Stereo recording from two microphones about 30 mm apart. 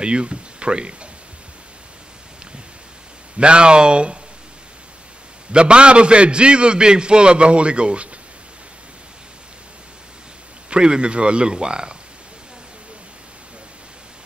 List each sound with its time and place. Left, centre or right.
0.0 s speech: right
3.3 s a man's voice: right
5.5 s a man's voice: right
10.7 s a man's voice: right